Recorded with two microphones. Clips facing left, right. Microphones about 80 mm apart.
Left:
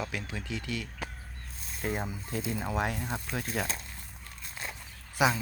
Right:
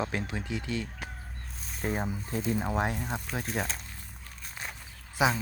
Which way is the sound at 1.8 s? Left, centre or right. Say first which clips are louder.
Right 2 dB; right.